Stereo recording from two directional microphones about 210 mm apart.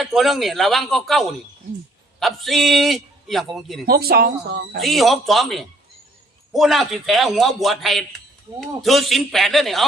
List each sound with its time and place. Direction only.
0.0 s a man's voice: centre (ahead or behind)
3.8 s speech: 45° right (ahead or behind)
4.8 s a man's voice: centre (ahead or behind)